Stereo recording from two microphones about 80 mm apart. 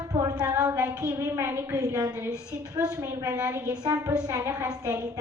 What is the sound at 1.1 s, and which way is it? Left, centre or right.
Speech, right.